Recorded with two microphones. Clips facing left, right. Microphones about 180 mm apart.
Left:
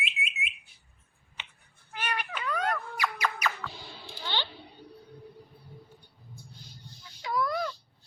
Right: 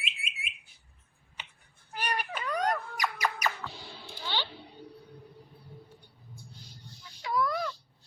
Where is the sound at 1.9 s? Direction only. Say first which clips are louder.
Right 1 dB; 40° right (ahead or behind).